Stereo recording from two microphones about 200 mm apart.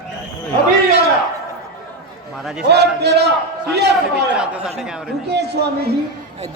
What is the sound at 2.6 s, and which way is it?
Speech, 55° right (ahead or behind).